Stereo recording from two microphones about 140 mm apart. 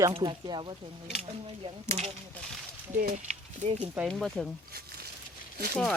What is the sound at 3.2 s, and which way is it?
Speech, 55° right (ahead or behind).